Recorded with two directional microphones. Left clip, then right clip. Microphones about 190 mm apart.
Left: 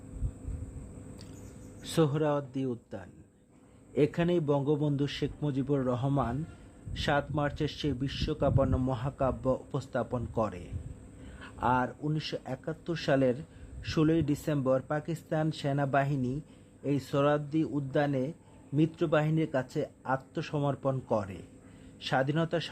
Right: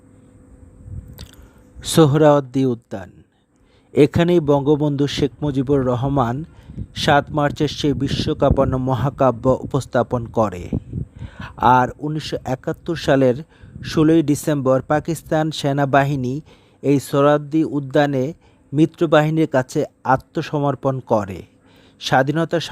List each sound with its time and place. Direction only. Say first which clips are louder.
1.8 s speech: right 15 dB; 50° right (ahead or behind)